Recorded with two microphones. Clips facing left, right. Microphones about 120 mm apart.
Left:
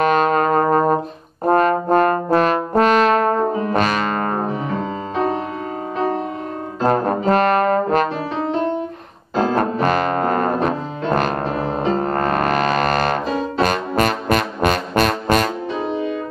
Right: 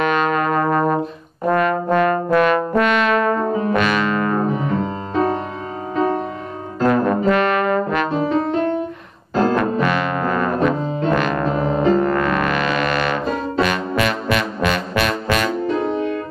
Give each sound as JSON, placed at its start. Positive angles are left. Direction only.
{"t": 0.0, "sound": "brass instrument", "side_deg": 40}
{"t": 6.9, "sound": "brass instrument", "side_deg": 40}
{"t": 9.6, "sound": "music", "side_deg": 40}